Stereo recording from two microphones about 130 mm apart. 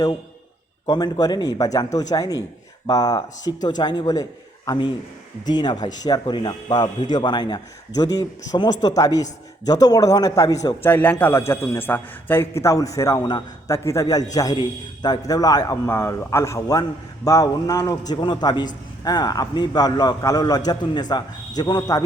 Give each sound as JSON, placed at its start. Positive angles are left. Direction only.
{"t": 0.9, "sound": "a man's voice", "side_deg": 30}
{"t": 10.9, "sound": "a man's voice", "side_deg": 15}